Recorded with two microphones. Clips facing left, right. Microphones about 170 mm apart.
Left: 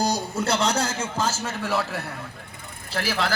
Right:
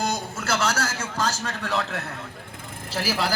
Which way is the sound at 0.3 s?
30° left (ahead or behind).